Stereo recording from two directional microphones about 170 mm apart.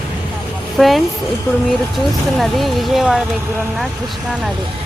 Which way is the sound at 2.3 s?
Centre (ahead or behind).